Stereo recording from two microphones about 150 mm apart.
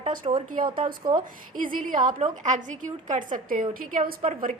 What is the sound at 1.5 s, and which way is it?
A woman's voice, 65° right (ahead or behind).